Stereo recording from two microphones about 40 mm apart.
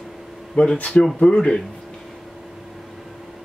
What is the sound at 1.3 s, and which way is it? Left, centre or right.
Speech, centre.